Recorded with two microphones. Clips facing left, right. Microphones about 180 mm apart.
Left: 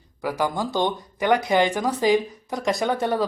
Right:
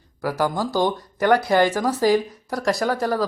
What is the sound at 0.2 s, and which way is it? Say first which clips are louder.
Speech: right 2 dB; 15° left (ahead or behind).